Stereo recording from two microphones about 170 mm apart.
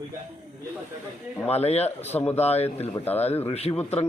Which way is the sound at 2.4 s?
40° left (ahead or behind).